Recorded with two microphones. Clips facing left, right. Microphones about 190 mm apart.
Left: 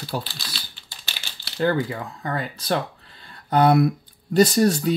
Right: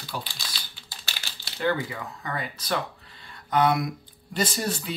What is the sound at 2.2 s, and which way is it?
Speech, 35° left (ahead or behind).